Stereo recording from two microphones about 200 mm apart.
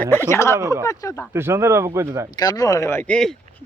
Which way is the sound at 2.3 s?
20° left (ahead or behind).